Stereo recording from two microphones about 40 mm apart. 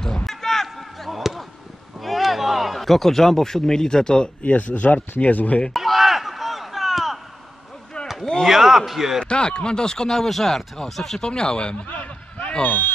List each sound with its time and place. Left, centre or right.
0.2 s basketball bounce: centre
2.0 s a man's voice: centre; by 4.5 s left
4.5 s speech: left
5.7 s a sound: centre
8.2 s speech: centre
8.5 s a man's voice: centre
9.2 s speech: left
11.2 s speech: left
11.9 s a sound: left
12.4 s basketball bounce: left